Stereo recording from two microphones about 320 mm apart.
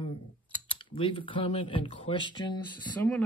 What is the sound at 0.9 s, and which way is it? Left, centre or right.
Speech, centre.